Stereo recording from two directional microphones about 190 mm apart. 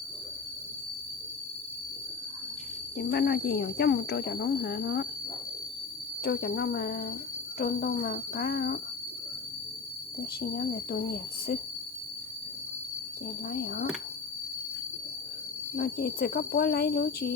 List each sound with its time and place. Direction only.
3.0 s speech: 55° left (ahead or behind)
6.2 s speech: 55° left (ahead or behind)
10.5 s speech: 50° left (ahead or behind)
13.5 s speech: 55° left (ahead or behind)
15.7 s speech: 50° left (ahead or behind)